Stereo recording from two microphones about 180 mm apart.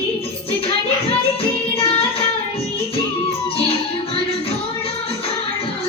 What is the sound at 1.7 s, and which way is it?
Music, 35° left (ahead or behind).